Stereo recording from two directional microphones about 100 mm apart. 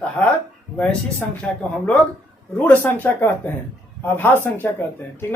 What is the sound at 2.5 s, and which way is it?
Speech, 15° left (ahead or behind).